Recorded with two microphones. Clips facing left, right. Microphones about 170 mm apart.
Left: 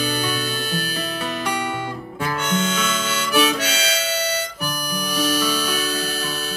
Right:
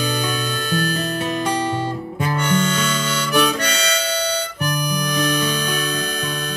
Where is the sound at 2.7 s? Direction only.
5° left (ahead or behind).